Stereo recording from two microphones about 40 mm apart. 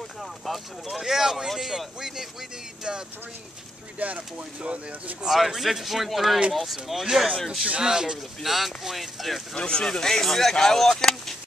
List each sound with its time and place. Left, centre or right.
0.5 s speech: centre
4.0 s speech: right
5.2 s speech: centre
8.4 s speech: centre
9.6 s speech: left